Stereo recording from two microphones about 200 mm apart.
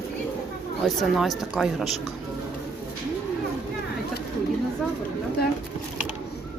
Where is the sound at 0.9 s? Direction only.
Centre (ahead or behind).